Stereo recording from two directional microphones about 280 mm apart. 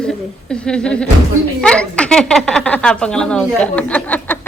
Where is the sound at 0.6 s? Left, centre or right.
Centre.